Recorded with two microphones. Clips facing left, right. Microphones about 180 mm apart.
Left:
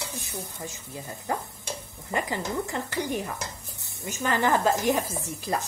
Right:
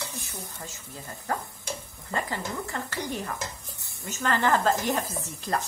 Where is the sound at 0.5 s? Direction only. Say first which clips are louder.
Left 4 dB; 15° left (ahead or behind).